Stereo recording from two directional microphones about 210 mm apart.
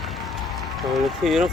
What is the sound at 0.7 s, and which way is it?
Speech, centre (ahead or behind).